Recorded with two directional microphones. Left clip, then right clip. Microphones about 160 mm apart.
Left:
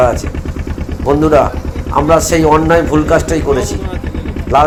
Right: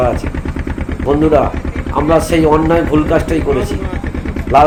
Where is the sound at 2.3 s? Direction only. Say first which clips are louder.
Left 2 dB; 10° left (ahead or behind).